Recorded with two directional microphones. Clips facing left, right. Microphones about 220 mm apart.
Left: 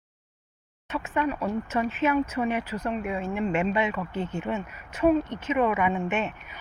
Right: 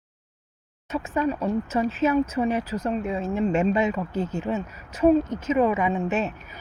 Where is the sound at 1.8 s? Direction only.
35° right (ahead or behind).